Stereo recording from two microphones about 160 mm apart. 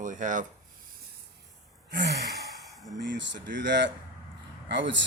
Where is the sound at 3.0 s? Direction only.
90° right.